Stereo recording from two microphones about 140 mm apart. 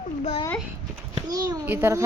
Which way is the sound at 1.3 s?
25° right (ahead or behind).